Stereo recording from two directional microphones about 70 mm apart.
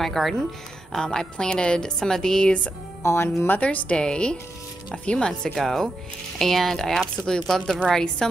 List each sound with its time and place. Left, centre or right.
0.0 s a woman's voice: centre
3.0 s speech: left
3.4 s a woman's voice: left